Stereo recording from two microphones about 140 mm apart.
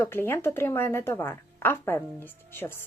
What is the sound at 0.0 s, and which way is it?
Speech, 15° left (ahead or behind).